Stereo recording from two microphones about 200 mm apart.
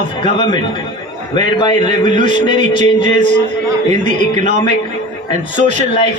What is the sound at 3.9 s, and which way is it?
Speech, 35° right (ahead or behind).